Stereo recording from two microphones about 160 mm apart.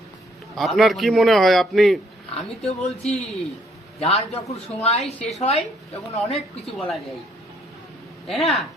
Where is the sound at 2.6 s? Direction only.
40° left (ahead or behind).